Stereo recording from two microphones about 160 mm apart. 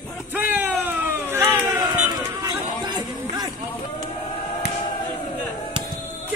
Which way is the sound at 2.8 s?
25° right (ahead or behind).